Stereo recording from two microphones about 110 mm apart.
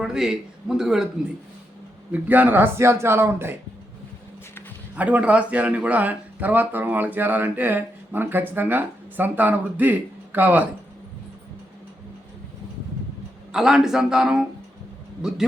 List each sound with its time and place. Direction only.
0.0 s a man's voice: 5° right (ahead or behind)
2.1 s a man's voice: 15° right (ahead or behind)
4.9 s speech: 15° right (ahead or behind)
13.5 s a man's voice: 5° right (ahead or behind)